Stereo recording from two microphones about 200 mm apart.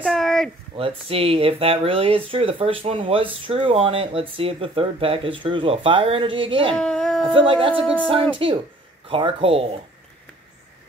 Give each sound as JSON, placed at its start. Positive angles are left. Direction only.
{"t": 0.0, "sound": "a sound", "side_deg": 0}
{"t": 0.7, "sound": "speech", "side_deg": -30}
{"t": 6.7, "sound": "speech", "side_deg": 5}
{"t": 7.3, "sound": "speech", "side_deg": -25}